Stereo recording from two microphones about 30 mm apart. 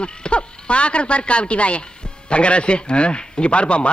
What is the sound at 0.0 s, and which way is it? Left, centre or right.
A man's voice, left.